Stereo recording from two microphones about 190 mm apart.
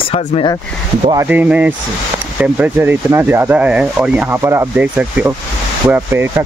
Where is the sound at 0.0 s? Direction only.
30° left (ahead or behind).